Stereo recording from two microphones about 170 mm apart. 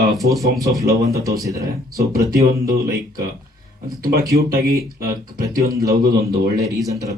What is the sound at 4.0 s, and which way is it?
Speech, 60° right (ahead or behind).